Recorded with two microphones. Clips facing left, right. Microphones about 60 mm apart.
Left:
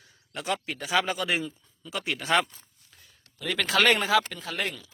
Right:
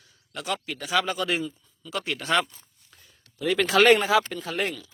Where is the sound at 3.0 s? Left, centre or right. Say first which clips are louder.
Right 6 dB; centre.